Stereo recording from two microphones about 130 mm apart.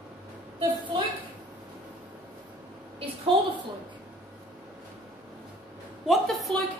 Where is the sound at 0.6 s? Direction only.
40° right (ahead or behind).